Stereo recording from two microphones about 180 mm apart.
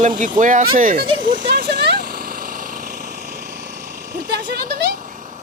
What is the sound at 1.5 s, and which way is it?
Vehicle, 65° right (ahead or behind).